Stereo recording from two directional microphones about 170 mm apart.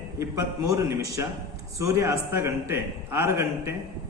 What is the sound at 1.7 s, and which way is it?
Mantra, 15° right (ahead or behind).